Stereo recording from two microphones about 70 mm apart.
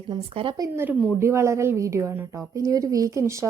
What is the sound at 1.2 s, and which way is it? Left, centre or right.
Speech, right.